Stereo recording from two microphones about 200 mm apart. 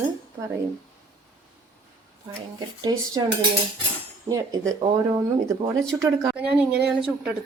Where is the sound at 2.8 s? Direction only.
20° right (ahead or behind).